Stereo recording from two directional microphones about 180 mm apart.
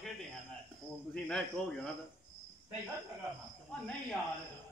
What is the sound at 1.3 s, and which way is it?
Speech, 5° left (ahead or behind).